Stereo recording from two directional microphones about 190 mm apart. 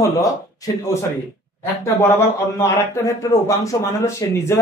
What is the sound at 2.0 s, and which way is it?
A man's voice, 15° left (ahead or behind).